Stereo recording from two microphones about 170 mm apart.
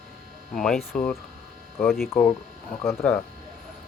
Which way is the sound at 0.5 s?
Centre (ahead or behind).